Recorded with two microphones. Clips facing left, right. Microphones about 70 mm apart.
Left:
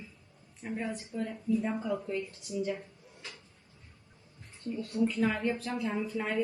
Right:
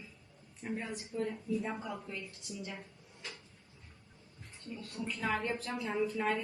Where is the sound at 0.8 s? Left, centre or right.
Left.